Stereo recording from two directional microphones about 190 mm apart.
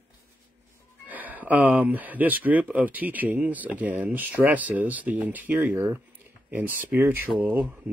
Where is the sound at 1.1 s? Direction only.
10° right (ahead or behind).